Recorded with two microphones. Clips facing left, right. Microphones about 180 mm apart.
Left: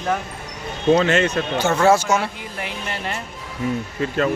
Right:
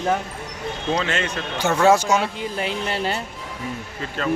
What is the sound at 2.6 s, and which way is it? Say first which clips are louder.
Speech: right 4 dB; 30° right (ahead or behind).